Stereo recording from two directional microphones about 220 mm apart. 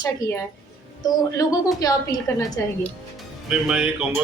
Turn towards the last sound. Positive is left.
turn(degrees=-5)  # may be behind; listen again after turning